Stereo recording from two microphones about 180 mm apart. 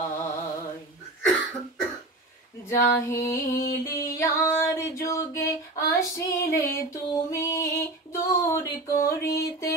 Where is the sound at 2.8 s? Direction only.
15° left (ahead or behind).